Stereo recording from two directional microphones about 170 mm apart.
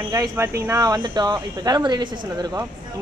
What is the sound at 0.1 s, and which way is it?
Speech, 20° right (ahead or behind).